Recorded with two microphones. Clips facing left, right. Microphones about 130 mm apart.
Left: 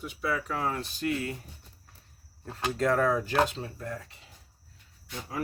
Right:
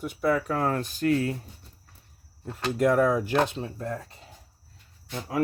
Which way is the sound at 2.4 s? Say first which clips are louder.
Right 4 dB; 15° right (ahead or behind).